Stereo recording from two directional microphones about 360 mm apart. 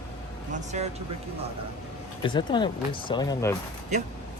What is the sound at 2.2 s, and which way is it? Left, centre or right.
Speech, centre.